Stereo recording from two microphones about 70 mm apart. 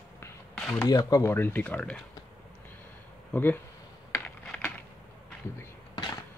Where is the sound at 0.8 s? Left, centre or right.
Left.